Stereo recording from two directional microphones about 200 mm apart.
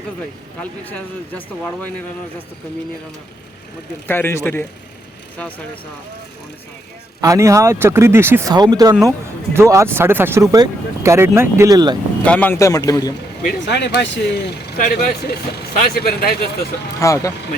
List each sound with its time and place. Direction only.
0.6 s a man's voice: 10° left (ahead or behind)
4.0 s a man's voice: 10° left (ahead or behind)
7.2 s speech: 15° right (ahead or behind)
12.2 s a man's voice: 5° left (ahead or behind)
13.7 s speech: 60° left (ahead or behind)
17.0 s a man's voice: 15° left (ahead or behind)